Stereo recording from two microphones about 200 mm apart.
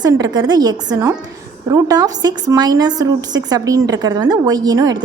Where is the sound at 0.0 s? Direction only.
20° right (ahead or behind).